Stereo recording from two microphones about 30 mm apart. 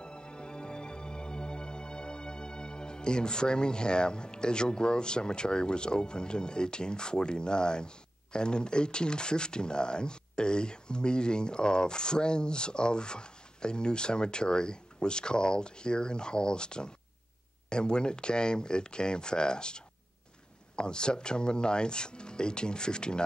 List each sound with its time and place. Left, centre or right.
0.0 s music: left
17.6 s speech: left